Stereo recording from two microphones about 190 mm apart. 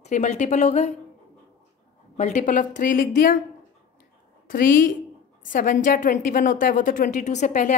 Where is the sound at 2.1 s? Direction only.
40° left (ahead or behind).